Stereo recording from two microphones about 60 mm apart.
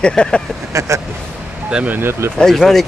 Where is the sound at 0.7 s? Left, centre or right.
Right.